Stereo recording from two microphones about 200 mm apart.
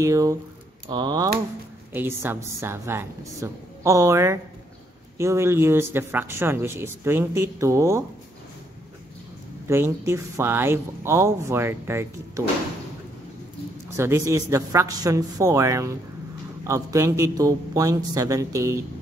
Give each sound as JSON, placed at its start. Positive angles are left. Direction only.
{"t": 0.0, "sound": "speech", "side_deg": -15}
{"t": 9.7, "sound": "speech", "side_deg": -15}
{"t": 13.8, "sound": "speech", "side_deg": -15}